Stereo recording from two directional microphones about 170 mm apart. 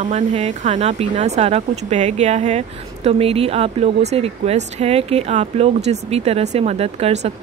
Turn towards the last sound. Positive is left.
turn(degrees=-40)  # may be behind; listen again after turning